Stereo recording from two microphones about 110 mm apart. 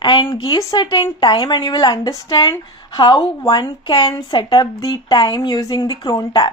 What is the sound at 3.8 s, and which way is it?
A woman's voice, 40° left (ahead or behind).